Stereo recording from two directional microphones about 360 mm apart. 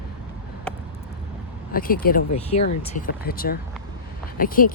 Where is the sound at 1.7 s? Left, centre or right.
Left.